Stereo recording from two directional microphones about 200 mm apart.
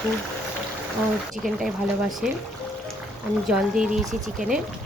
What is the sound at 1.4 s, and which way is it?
Speech, centre (ahead or behind).